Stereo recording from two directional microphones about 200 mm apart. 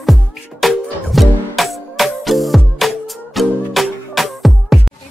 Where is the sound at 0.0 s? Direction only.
Centre (ahead or behind).